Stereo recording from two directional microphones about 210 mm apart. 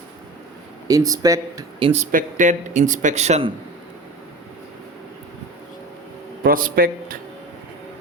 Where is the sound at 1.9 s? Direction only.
35° right (ahead or behind).